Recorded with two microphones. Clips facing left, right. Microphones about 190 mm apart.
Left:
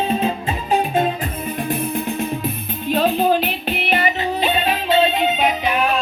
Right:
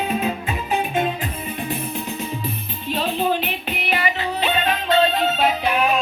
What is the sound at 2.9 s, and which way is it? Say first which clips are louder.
Music: left 5 dB; 45° left (ahead or behind).